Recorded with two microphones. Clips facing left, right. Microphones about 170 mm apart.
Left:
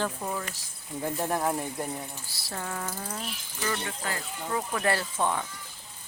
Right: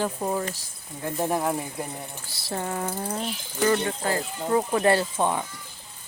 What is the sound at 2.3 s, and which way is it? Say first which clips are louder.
Speech: right 7 dB; 25° right (ahead or behind).